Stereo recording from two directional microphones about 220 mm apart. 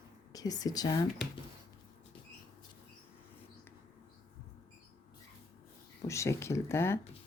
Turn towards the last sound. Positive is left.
turn(degrees=10)  # may be behind; listen again after turning